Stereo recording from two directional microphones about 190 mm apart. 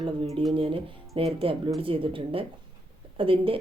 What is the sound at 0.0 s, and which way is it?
Speech, 30° right (ahead or behind).